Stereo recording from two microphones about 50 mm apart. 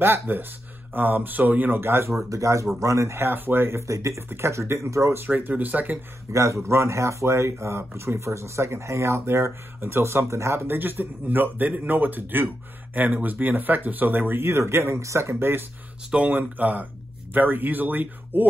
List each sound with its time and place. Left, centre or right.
0.0 s speech: right
1.8 s speech: right
3.2 s speech: right
4.3 s speech: right
5.5 s speech: right
6.3 s speech: right
6.7 s speech: right
9.2 s speech: right
10.7 s speech: right
14.4 s speech: right
15.3 s speech: right
16.3 s speech: right